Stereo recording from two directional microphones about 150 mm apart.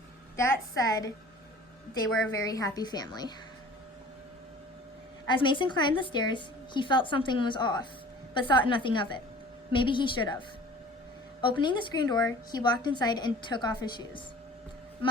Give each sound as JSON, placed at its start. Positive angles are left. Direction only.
{"t": 0.3, "sound": "a woman's voice", "side_deg": 20}
{"t": 2.3, "sound": "a woman's voice", "side_deg": 25}
{"t": 5.2, "sound": "a woman's voice", "side_deg": 30}
{"t": 11.4, "sound": "a woman's voice", "side_deg": 30}